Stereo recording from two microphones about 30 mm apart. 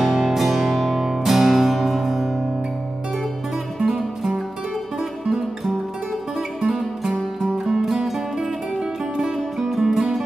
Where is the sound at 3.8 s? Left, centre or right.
Centre.